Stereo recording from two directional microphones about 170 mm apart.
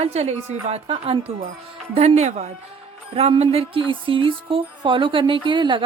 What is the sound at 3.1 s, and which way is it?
Music, 35° right (ahead or behind).